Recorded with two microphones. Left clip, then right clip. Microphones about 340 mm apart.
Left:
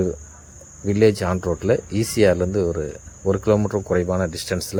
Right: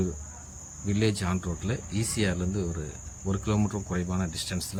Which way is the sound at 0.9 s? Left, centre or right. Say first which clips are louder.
Left 12 dB; centre.